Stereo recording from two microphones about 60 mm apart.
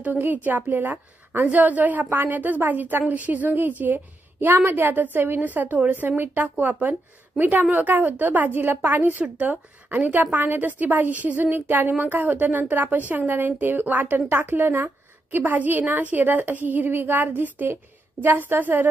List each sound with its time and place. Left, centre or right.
0.0 s a woman's voice: right